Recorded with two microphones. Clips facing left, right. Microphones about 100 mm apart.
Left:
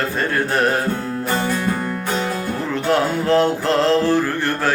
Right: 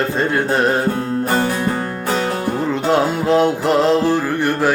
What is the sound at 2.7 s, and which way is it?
Music, 20° right (ahead or behind).